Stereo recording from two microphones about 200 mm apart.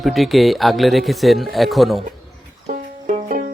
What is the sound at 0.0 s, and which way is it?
Speech, centre (ahead or behind).